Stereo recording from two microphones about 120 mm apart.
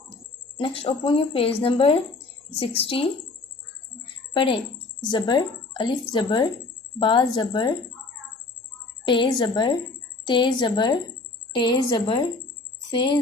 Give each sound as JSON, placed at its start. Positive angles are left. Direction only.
{"t": 0.5, "sound": "speech", "side_deg": 50}
{"t": 4.4, "sound": "speech", "side_deg": 45}
{"t": 9.0, "sound": "speech", "side_deg": 45}